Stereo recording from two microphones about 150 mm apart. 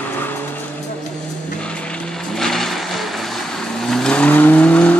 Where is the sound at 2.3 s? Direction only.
Centre (ahead or behind).